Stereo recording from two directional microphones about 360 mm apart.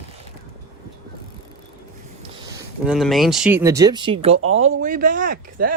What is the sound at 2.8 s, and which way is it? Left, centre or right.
Speech, centre.